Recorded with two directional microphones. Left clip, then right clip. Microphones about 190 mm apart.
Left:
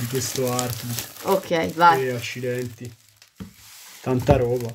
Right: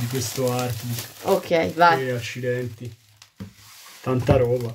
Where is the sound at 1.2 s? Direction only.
Centre (ahead or behind).